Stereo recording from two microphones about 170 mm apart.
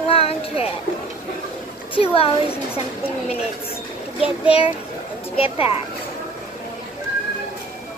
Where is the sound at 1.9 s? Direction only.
35° left (ahead or behind).